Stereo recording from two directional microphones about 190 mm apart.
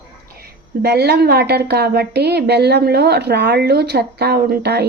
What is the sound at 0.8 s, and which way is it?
A woman's voice, 60° right (ahead or behind).